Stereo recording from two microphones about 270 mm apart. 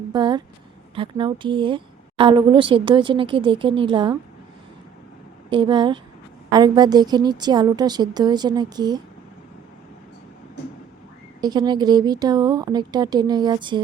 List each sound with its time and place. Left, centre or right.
0.1 s a woman's voice: centre
5.5 s a woman's voice: centre
11.3 s a woman's voice: centre